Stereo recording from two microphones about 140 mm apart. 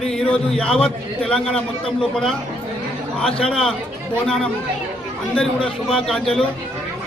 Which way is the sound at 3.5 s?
5° left (ahead or behind).